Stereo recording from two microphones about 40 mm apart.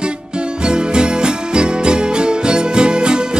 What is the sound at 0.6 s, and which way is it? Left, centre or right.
Music, right.